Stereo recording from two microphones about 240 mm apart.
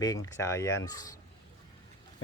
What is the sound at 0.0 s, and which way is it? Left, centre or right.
Speech, centre.